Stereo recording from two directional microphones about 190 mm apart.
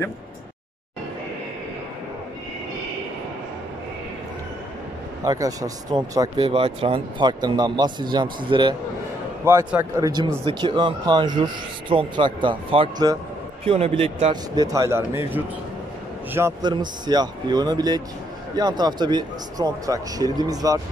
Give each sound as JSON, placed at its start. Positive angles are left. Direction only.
{"t": 5.2, "sound": "speech", "side_deg": -20}
{"t": 9.4, "sound": "speech", "side_deg": -15}